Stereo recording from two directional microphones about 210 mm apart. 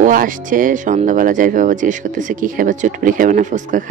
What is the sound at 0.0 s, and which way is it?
Speech, 40° right (ahead or behind).